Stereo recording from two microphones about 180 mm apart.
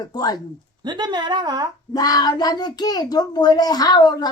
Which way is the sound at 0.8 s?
25° right (ahead or behind).